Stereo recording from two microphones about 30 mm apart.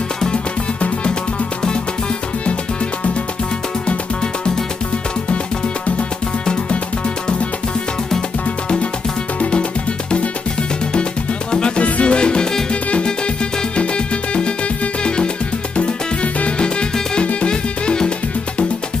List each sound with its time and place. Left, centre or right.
0.3 s music: left
11.5 s music: left
13.7 s music: left
15.7 s music: left
17.5 s music: left